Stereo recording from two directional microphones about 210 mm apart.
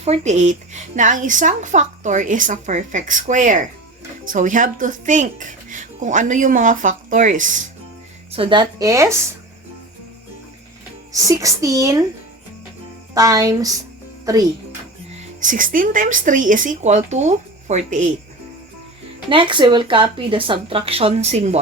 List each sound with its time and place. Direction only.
0.0 s speech: 30° right (ahead or behind)
8.3 s a woman's voice: 25° right (ahead or behind)
11.1 s a child's voice: 15° right (ahead or behind)
13.1 s a child's voice: 15° right (ahead or behind)
15.4 s speech: 40° right (ahead or behind)
19.3 s a woman's voice: 25° right (ahead or behind)